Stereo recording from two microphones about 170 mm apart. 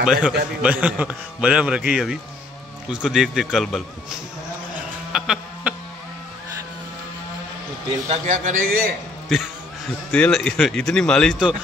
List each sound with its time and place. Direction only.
0.0 s a man's voice: 5° right (ahead or behind)
4.7 s a sound: 5° right (ahead or behind)
8.1 s a man's voice: 45° right (ahead or behind)
10.1 s speech: 5° left (ahead or behind)